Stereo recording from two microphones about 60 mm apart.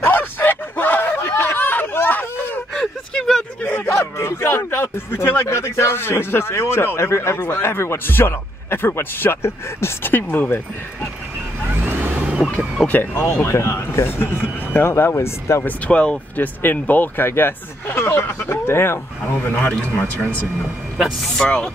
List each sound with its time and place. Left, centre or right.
0.0 s a sound: left
2.7 s gasp: centre
3.6 s a sound: left
4.2 s a man's voice: left
11.7 s vehicle: right
12.2 s vehicle: centre
12.8 s a man's voice: left
15.9 s speech: centre
16.3 s a man's voice: left
19.4 s speech: left